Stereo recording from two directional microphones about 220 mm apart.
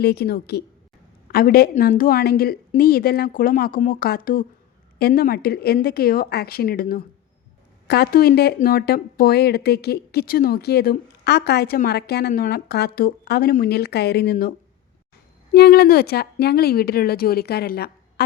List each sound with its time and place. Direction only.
0.0 s speech: 45° left (ahead or behind)
15.5 s speech: 45° left (ahead or behind)